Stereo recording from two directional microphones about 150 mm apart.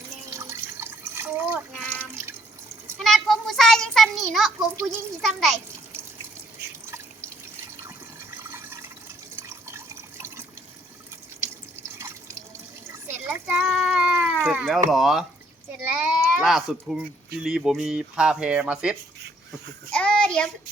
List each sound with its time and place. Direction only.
0.3 s water: 20° right (ahead or behind)
3.0 s a child's voice: centre (ahead or behind)
7.9 s water: 15° right (ahead or behind)
13.2 s cat: 10° right (ahead or behind)
15.8 s sheep: 10° right (ahead or behind)
17.4 s speech: 5° right (ahead or behind)
19.9 s child singing: 5° left (ahead or behind)